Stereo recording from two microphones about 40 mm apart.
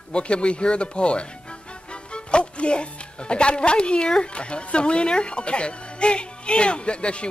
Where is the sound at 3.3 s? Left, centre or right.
Left.